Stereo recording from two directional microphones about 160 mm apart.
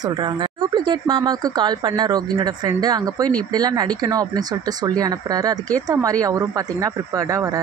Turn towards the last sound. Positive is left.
turn(degrees=-20)  # may be behind; listen again after turning